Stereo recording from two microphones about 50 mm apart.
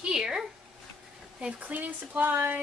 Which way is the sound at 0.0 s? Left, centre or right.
Centre.